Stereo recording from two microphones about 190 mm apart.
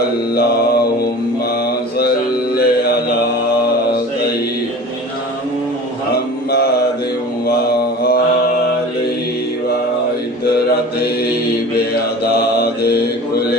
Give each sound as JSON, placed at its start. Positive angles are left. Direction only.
{"t": 2.6, "sound": "music", "side_deg": 55}
{"t": 12.2, "sound": "mantra", "side_deg": 55}